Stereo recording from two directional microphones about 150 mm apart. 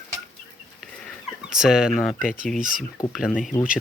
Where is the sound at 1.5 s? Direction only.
5° right (ahead or behind).